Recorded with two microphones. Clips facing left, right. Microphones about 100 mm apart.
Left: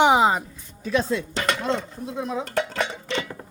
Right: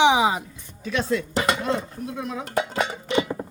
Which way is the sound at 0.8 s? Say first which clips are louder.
Left 1 dB; 30° left (ahead or behind).